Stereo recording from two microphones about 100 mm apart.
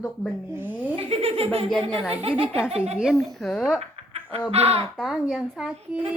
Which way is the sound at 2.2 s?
70° right (ahead or behind).